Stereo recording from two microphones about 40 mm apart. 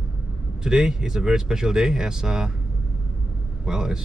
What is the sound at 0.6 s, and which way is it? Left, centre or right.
Speech, centre.